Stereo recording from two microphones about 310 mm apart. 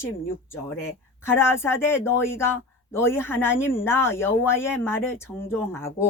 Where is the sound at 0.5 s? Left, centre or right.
Centre.